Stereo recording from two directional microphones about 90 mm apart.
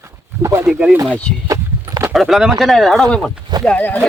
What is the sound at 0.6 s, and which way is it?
Speech, 10° right (ahead or behind).